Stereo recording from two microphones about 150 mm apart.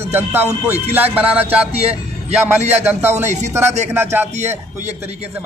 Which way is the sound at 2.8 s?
15° right (ahead or behind).